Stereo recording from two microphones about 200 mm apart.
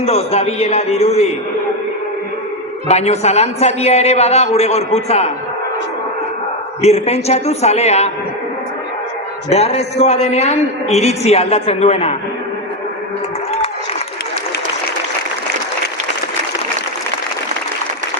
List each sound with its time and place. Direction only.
0.0 s a man's voice: 30° left (ahead or behind)
2.8 s a man's voice: 35° left (ahead or behind)
6.8 s a man's voice: 30° left (ahead or behind)
9.5 s a man's voice: 30° left (ahead or behind)